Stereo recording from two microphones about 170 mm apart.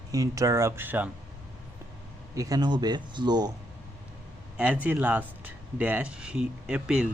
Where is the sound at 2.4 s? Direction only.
20° right (ahead or behind).